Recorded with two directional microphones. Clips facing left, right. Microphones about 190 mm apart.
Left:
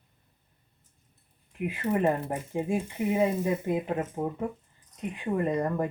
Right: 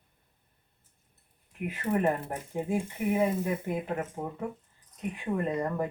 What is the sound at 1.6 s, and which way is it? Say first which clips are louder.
Speech: left 2 dB; 15° left (ahead or behind).